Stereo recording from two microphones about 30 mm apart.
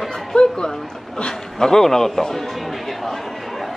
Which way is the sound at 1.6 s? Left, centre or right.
Centre.